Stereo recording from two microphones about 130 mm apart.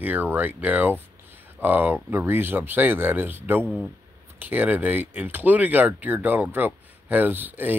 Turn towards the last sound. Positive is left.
turn(degrees=-15)  # may be behind; listen again after turning